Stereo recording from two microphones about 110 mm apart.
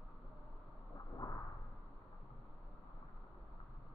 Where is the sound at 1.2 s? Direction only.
35° left (ahead or behind).